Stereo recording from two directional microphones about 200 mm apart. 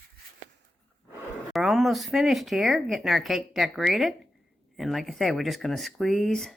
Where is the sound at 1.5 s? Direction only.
Centre (ahead or behind).